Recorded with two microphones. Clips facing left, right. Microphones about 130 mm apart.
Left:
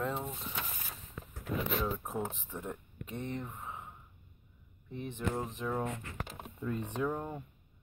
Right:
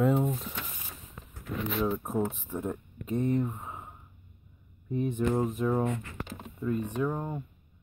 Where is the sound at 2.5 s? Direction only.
15° right (ahead or behind).